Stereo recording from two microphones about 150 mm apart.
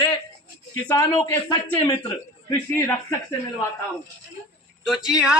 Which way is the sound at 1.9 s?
25° left (ahead or behind).